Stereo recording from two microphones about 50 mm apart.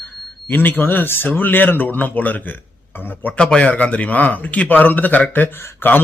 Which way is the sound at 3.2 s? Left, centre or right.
Left.